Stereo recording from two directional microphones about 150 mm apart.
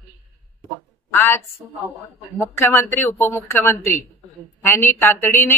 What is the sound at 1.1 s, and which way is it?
A man's voice, 15° left (ahead or behind).